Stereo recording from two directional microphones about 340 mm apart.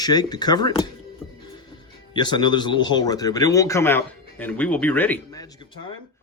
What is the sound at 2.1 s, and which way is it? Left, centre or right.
Speech, centre.